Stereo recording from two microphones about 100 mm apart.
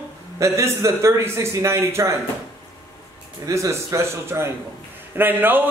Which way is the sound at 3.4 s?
30° right (ahead or behind).